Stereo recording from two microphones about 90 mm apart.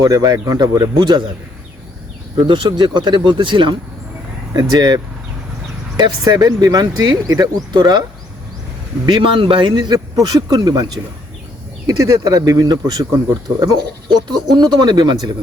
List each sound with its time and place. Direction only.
0.0 s speech: 40° right (ahead or behind)
2.3 s speech: 60° right (ahead or behind)
4.5 s speech: 45° right (ahead or behind)
6.0 s speech: 45° right (ahead or behind)
9.0 s speech: 70° right (ahead or behind)
10.2 s speech: 45° right (ahead or behind)
11.9 s speech: 40° right (ahead or behind)
14.3 s speech: 55° right (ahead or behind)